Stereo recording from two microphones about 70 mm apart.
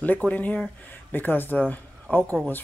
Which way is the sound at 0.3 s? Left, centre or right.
Left.